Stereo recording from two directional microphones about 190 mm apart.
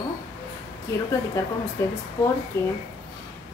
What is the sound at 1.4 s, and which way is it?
Speech, 15° left (ahead or behind).